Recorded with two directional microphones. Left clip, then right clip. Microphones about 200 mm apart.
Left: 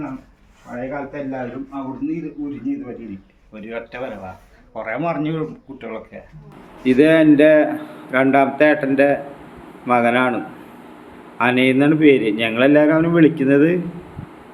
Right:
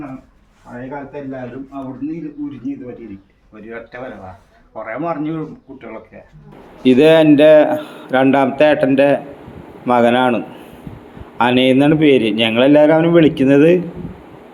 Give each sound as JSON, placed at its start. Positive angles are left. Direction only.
{"t": 4.8, "sound": "a man's voice", "side_deg": 25}
{"t": 6.8, "sound": "a man's voice", "side_deg": -25}